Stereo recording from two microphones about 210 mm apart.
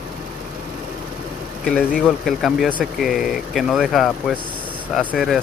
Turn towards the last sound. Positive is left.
turn(degrees=0)  # may be behind; listen again after turning